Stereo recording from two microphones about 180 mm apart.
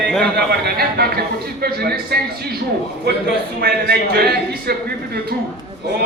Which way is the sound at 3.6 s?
60° right (ahead or behind).